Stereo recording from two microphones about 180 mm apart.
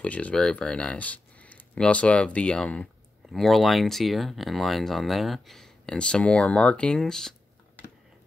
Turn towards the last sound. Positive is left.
turn(degrees=5)  # may be behind; listen again after turning